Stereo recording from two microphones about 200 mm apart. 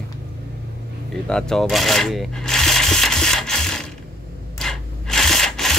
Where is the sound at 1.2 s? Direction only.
5° left (ahead or behind).